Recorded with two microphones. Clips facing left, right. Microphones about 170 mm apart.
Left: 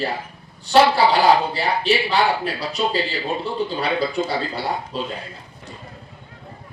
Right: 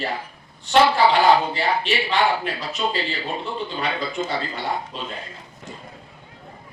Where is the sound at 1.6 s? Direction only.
35° left (ahead or behind).